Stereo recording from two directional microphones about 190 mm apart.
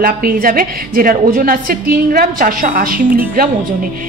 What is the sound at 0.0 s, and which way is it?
A woman's voice, 50° right (ahead or behind).